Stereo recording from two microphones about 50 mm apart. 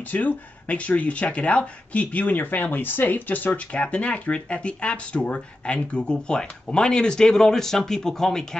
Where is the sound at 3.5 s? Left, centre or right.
Left.